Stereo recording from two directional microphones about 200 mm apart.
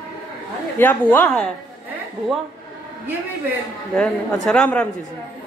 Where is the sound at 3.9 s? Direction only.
5° left (ahead or behind).